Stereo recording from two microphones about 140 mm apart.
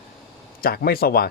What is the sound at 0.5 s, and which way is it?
Speech, 90° left.